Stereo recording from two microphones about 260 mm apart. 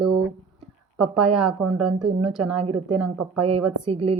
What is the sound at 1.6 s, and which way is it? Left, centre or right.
Speech, right.